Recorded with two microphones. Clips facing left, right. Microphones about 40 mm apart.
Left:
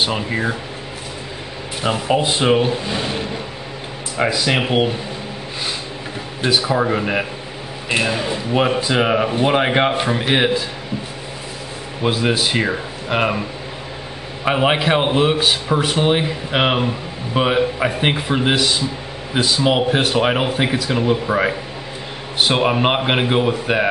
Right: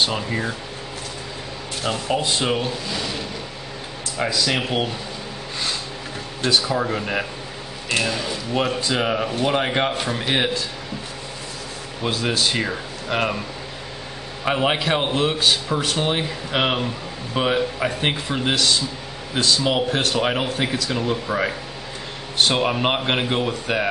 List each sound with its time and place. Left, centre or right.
0.0 s a man's voice: centre
1.8 s speech: centre
6.4 s a man's voice: centre
12.0 s a man's voice: centre